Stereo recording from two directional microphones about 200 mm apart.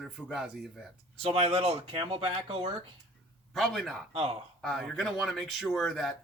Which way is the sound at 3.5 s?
Centre (ahead or behind).